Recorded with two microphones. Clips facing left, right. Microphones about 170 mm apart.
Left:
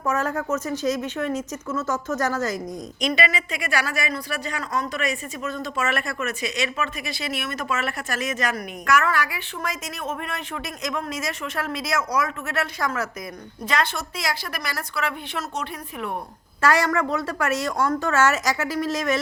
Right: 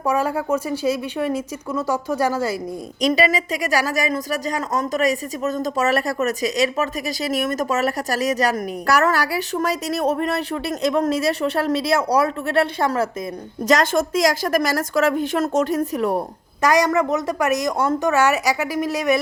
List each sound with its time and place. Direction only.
0.0 s a woman's voice: 10° right (ahead or behind)
3.2 s speech: 40° right (ahead or behind)
13.7 s a woman's voice: 45° right (ahead or behind)
16.6 s a woman's voice: 15° right (ahead or behind)